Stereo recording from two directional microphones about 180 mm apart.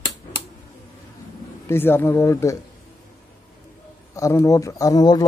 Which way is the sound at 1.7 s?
10° left (ahead or behind).